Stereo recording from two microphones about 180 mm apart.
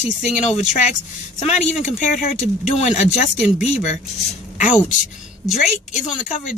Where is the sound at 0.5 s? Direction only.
45° left (ahead or behind).